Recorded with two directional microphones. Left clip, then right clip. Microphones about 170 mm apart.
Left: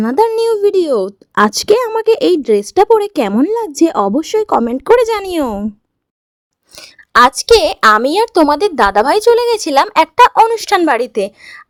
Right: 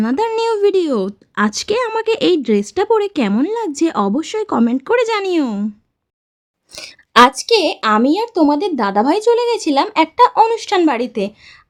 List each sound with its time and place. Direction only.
0.0 s speech: 35° left (ahead or behind)
6.7 s speech: centre (ahead or behind)
7.1 s a woman's voice: 45° left (ahead or behind)